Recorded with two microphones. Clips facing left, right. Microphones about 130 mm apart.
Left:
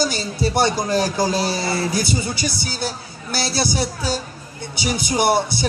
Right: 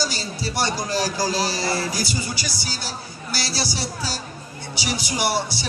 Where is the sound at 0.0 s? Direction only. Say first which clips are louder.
Left 6 dB; 55° left (ahead or behind).